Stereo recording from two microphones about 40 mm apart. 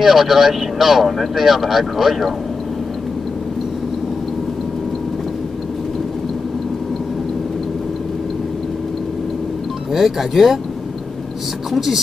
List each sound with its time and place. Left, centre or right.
0.0 s speech: centre
9.9 s speech: centre
11.7 s speech: centre